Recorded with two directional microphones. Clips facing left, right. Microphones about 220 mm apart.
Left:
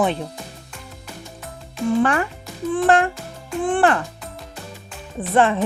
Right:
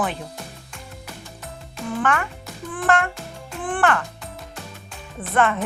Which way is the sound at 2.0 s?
35° left (ahead or behind).